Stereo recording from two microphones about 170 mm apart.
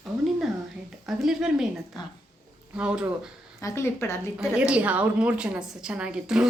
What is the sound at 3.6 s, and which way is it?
Speech, 15° left (ahead or behind).